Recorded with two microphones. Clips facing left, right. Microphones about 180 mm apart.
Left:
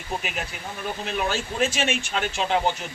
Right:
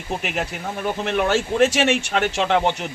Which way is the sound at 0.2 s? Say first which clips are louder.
Right 6 dB; 70° right (ahead or behind).